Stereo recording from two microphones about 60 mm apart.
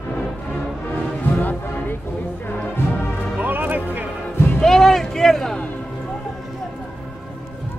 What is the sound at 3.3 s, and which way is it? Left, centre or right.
Music, right.